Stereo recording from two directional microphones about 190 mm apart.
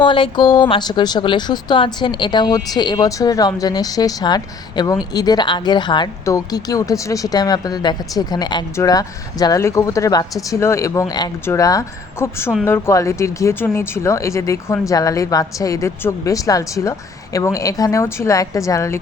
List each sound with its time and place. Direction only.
0.0 s speech: 25° left (ahead or behind)